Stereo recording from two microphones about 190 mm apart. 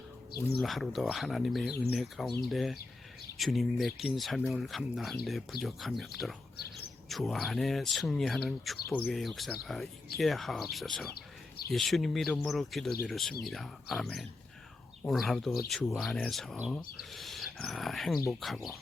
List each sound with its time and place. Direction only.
0.6 s speech: centre (ahead or behind)
11.1 s bird: 55° left (ahead or behind)
11.7 s speech: centre (ahead or behind)